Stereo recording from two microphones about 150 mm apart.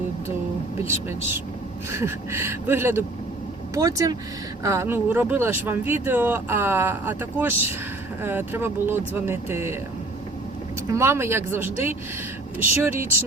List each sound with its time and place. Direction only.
0.8 s speech: 15° right (ahead or behind)
10.9 s speech: 15° right (ahead or behind)